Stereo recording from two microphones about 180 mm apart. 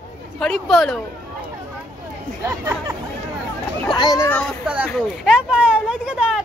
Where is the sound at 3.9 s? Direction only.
20° left (ahead or behind).